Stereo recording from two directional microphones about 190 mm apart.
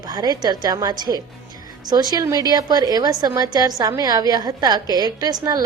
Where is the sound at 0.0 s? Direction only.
20° right (ahead or behind).